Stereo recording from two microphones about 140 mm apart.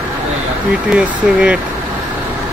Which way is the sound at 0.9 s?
5° right (ahead or behind).